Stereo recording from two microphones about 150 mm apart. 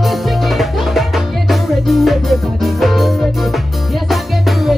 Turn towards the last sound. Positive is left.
turn(degrees=0)  # may be behind; listen again after turning